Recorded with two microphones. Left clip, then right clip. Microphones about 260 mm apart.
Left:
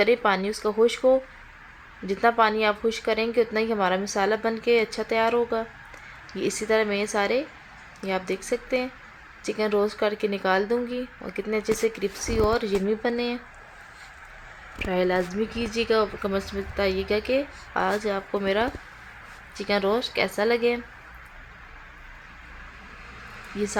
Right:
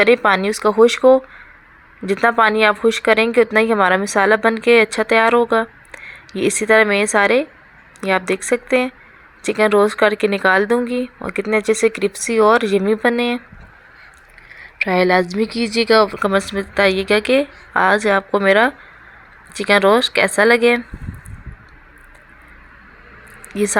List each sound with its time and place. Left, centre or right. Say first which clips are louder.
0.0 s a woman's voice: right 8 dB; right
14.8 s a woman's voice: right 10 dB; right